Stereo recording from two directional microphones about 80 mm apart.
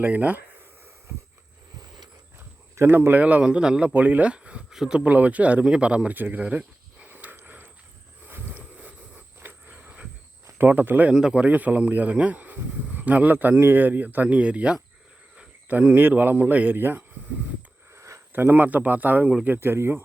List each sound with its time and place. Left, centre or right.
0.0 s speech: centre
2.7 s speech: right
8.3 s a sound: right
10.6 s speech: right
11.1 s speech: centre; by 17.0 s right
17.9 s a sound: right
18.3 s speech: right